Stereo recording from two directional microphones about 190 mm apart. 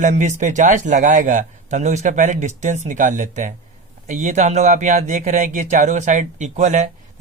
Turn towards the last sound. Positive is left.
turn(degrees=-40)  # may be behind; listen again after turning